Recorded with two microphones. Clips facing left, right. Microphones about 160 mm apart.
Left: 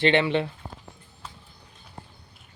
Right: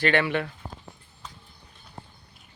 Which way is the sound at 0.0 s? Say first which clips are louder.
Left 2 dB; 25° left (ahead or behind).